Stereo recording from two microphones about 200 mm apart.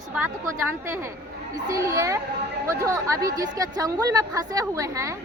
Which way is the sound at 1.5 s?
15° right (ahead or behind).